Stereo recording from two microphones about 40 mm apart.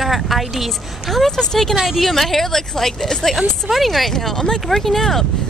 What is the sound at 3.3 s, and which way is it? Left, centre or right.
Speech, centre.